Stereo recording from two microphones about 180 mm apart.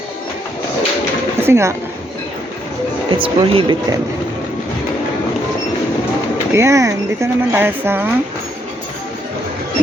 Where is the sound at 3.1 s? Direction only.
30° right (ahead or behind).